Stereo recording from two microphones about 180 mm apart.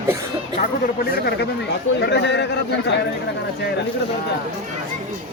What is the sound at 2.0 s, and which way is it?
Speech, 75° left (ahead or behind).